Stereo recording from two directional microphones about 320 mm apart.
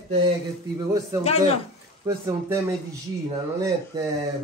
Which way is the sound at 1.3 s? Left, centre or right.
Centre.